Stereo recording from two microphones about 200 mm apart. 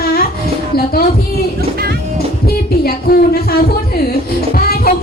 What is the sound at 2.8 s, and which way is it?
Speech, 50° left (ahead or behind).